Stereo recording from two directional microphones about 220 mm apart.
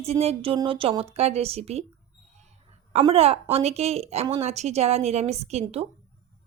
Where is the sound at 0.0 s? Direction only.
30° right (ahead or behind).